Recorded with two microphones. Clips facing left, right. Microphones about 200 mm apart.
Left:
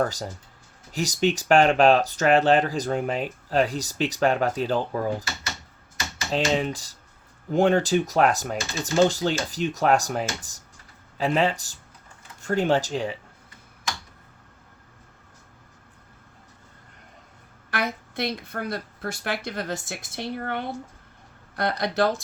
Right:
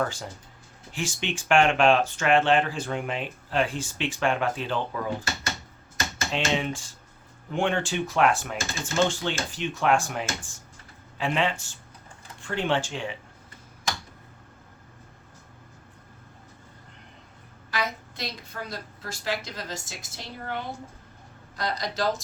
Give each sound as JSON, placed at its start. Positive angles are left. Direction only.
{"t": 0.0, "sound": "speech", "side_deg": 40}
{"t": 6.3, "sound": "speech", "side_deg": 40}
{"t": 17.7, "sound": "a woman's voice", "side_deg": 60}